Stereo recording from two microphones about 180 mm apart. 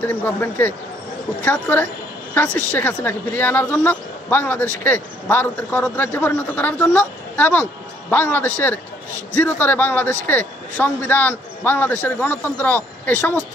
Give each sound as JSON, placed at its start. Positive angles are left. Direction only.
{"t": 0.0, "sound": "speech", "side_deg": 10}